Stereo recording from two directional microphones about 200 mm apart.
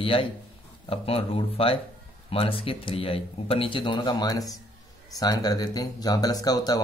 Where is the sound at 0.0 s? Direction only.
25° left (ahead or behind).